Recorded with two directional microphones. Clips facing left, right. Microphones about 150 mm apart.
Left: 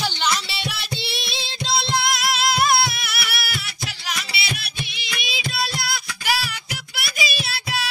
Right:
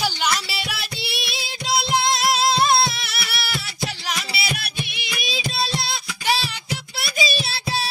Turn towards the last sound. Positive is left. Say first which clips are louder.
# right 2 dB
turn(degrees=-30)  # may be behind; listen again after turning